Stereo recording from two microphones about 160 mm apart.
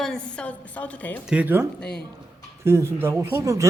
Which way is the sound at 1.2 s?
5° right (ahead or behind).